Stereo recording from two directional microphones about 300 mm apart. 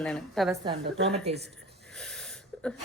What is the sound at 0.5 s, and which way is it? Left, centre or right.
Speech, centre.